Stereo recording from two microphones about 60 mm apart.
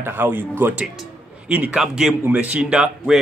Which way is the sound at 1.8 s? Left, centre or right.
Centre.